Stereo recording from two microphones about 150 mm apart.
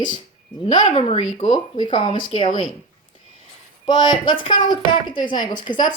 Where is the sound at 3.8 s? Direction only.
30° left (ahead or behind).